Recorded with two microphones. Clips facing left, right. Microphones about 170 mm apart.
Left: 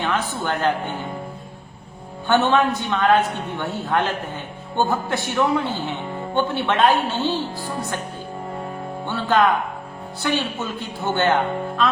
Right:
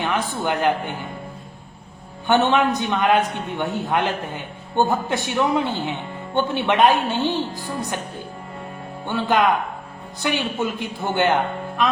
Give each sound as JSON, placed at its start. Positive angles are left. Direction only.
{"t": 0.0, "sound": "a man's voice", "side_deg": -15}
{"t": 2.2, "sound": "a man's voice", "side_deg": -20}
{"t": 9.0, "sound": "a man's voice", "side_deg": -15}